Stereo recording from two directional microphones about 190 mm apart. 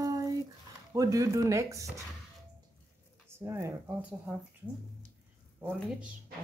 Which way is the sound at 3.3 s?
10° right (ahead or behind).